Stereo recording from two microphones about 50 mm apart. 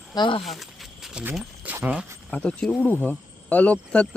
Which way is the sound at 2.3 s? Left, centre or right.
Left.